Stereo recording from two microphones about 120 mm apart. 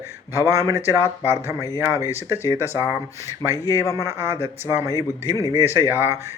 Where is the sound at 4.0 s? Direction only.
20° right (ahead or behind).